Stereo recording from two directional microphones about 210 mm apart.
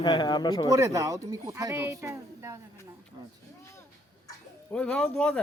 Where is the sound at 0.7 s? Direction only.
15° right (ahead or behind).